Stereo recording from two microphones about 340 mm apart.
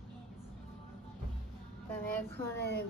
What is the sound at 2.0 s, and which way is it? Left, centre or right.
Speech, centre.